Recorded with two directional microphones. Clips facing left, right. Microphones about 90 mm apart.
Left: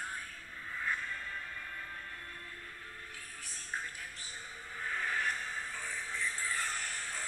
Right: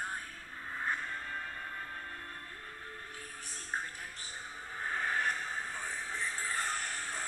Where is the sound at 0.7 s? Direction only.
40° right (ahead or behind).